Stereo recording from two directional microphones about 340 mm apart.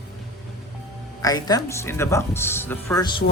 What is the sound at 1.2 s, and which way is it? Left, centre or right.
Speech, centre.